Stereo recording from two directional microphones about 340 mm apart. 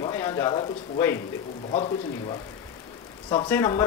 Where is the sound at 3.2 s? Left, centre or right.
Centre.